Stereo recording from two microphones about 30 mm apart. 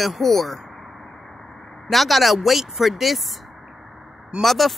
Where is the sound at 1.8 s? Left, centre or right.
Centre.